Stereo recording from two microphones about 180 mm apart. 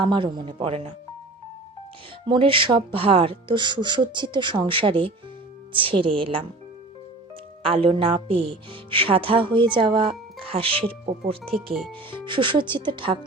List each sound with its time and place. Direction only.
0.0 s speech: 25° right (ahead or behind)
2.2 s speech: 25° right (ahead or behind)
7.6 s speech: 30° right (ahead or behind)